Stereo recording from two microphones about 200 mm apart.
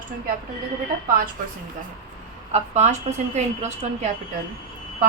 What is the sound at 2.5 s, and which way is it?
A woman's voice, 35° right (ahead or behind).